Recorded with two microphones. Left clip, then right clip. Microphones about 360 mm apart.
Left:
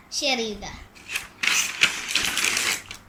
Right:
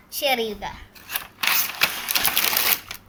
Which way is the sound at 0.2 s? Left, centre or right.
Right.